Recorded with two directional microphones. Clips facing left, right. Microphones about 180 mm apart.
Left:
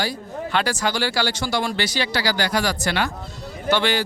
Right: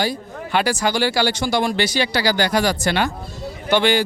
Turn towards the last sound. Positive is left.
turn(degrees=-15)  # may be behind; listen again after turning